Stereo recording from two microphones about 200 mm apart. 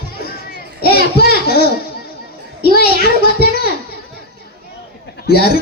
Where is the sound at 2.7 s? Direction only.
50° left (ahead or behind).